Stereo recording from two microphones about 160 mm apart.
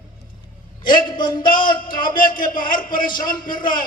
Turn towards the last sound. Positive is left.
turn(degrees=60)  # may be behind; listen again after turning